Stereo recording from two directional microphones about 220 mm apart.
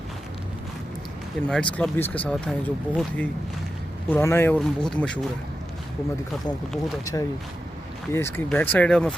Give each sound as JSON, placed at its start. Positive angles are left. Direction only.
{"t": 1.5, "sound": "speech", "side_deg": 5}
{"t": 7.0, "sound": "speech", "side_deg": 15}